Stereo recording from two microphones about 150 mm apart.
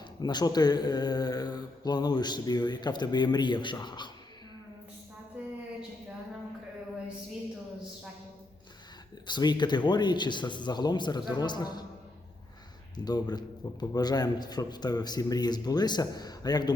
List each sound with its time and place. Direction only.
0.2 s speech: 30° left (ahead or behind)
5.4 s a sound: 10° right (ahead or behind)
9.2 s speech: 30° left (ahead or behind)
13.0 s speech: 25° left (ahead or behind)